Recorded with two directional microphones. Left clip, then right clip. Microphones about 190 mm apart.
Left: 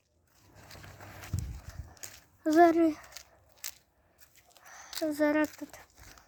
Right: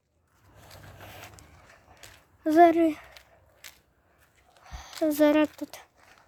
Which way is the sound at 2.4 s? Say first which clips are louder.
Right 4 dB; 10° right (ahead or behind).